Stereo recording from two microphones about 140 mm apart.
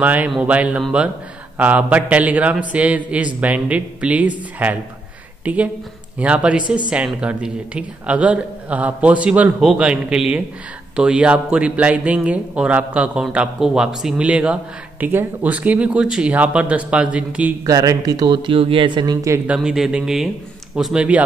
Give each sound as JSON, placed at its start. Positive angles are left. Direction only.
{"t": 0.0, "sound": "speech", "side_deg": -10}
{"t": 17.6, "sound": "speech", "side_deg": -25}
{"t": 19.4, "sound": "speech", "side_deg": -5}